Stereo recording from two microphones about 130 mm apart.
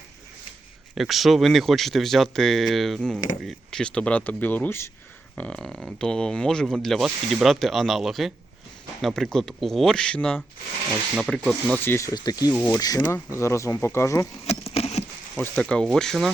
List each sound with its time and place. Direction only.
0.9 s speech: centre (ahead or behind)
11.9 s speech: 25° left (ahead or behind)
14.4 s a sound: 50° left (ahead or behind)
15.4 s speech: 10° left (ahead or behind)